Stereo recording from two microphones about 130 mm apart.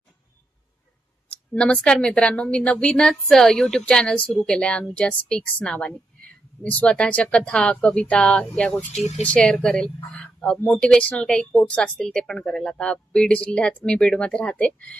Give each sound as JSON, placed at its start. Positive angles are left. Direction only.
{"t": 1.5, "sound": "speech", "side_deg": 10}
{"t": 8.9, "sound": "speech", "side_deg": 60}
{"t": 9.2, "sound": "speech", "side_deg": 5}